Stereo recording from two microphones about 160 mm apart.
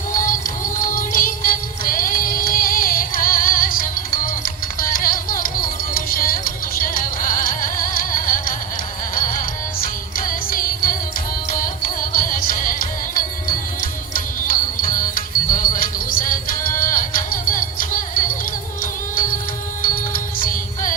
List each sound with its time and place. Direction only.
0.1 s music: 55° left (ahead or behind)
14.1 s music: 60° left (ahead or behind)